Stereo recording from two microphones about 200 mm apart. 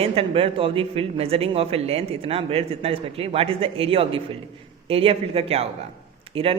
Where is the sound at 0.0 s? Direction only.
30° right (ahead or behind).